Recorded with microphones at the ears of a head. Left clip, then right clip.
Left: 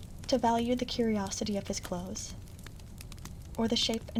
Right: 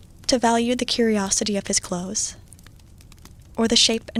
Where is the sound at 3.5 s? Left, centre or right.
Right.